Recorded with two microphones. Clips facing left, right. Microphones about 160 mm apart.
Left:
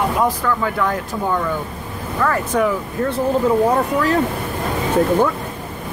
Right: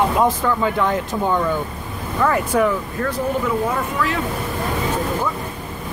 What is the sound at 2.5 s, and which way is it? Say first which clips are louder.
Speech: even; 5° right (ahead or behind).